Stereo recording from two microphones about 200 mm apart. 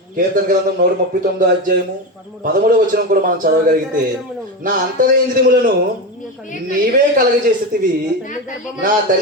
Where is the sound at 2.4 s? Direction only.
45° right (ahead or behind).